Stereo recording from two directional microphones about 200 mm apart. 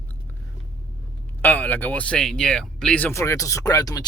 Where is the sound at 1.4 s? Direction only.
10° left (ahead or behind).